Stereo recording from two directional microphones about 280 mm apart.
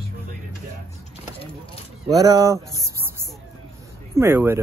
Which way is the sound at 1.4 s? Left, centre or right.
Centre.